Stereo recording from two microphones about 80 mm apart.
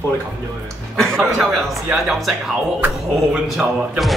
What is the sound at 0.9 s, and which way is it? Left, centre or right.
Speech, centre.